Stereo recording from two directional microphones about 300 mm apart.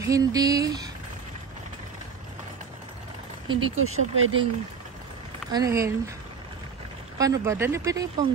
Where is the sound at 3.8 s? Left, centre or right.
Right.